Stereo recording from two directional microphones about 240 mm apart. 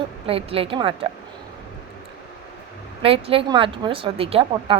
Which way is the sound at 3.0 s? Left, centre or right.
Right.